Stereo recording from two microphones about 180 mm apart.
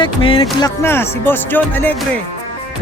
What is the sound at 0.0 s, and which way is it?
Music, 30° left (ahead or behind).